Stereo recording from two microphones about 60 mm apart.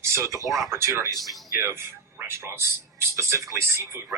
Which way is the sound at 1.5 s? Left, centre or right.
Right.